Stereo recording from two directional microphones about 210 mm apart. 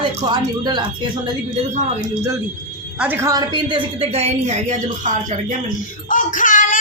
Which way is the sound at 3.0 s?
10° right (ahead or behind).